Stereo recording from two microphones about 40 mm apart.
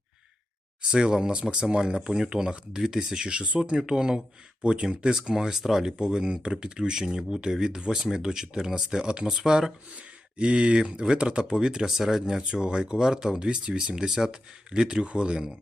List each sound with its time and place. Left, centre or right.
0.8 s speech: right
3.2 s speech: right
3.8 s speech: centre
13.4 s speech: right